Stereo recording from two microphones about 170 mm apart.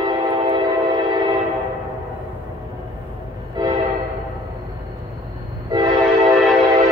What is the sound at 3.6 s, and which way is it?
Train horn, 25° right (ahead or behind).